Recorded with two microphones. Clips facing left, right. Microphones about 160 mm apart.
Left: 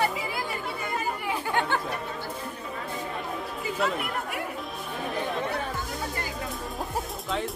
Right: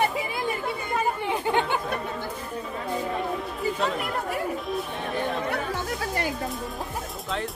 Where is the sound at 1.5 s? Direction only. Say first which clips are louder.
Even; 15° right (ahead or behind).